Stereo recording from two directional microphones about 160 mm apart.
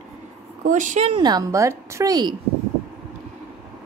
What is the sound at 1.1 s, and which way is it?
A woman's voice, 25° right (ahead or behind).